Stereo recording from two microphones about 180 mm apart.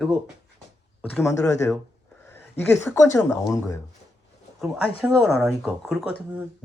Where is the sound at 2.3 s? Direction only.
15° left (ahead or behind).